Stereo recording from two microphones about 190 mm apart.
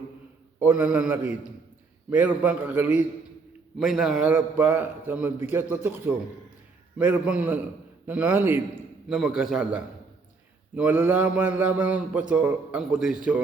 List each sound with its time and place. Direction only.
0.6 s a man's voice: 5° right (ahead or behind)